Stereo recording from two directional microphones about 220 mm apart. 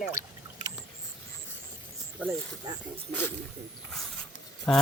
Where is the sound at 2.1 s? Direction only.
10° right (ahead or behind).